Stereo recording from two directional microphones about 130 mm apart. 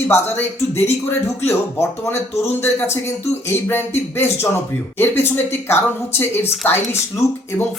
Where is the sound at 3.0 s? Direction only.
20° left (ahead or behind).